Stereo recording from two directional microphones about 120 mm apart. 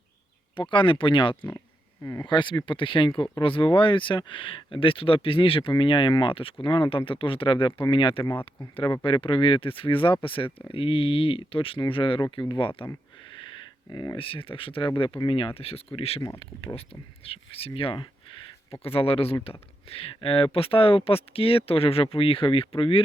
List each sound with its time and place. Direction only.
0.5 s speech: 40° left (ahead or behind)
13.9 s speech: 35° left (ahead or behind)
14.2 s speech: 50° left (ahead or behind)